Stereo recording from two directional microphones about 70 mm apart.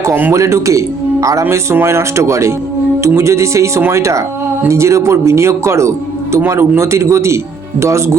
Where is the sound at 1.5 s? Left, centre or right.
Right.